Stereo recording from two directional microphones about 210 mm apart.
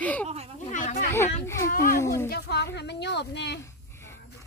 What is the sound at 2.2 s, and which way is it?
A woman's voice, 50° left (ahead or behind).